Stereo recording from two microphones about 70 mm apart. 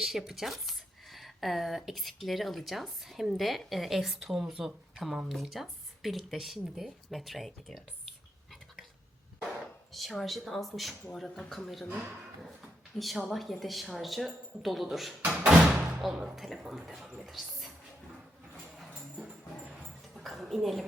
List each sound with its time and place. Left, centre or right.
0.0 s speech: centre
9.6 s speech: centre
15.2 s speech: centre
16.0 s speech: centre
20.1 s a sound: centre